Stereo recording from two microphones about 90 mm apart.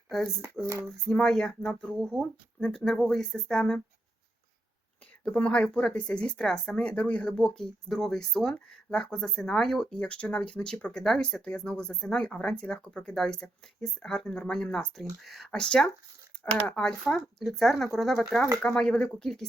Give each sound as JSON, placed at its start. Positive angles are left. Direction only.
{"t": 0.6, "sound": "a sound", "side_deg": -30}
{"t": 1.0, "sound": "speech", "side_deg": 5}
{"t": 5.2, "sound": "speech", "side_deg": 15}